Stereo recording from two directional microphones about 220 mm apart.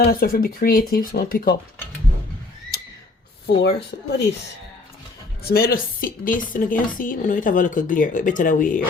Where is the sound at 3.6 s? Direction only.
50° left (ahead or behind).